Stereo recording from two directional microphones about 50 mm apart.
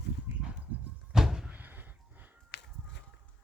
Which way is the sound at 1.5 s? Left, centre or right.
Right.